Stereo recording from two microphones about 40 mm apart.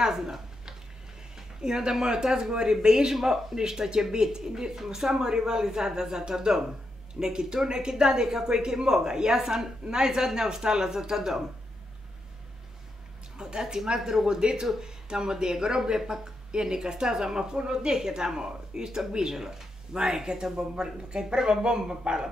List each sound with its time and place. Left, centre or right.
0.0 s a sound: centre
1.3 s speech: centre
13.4 s speech: centre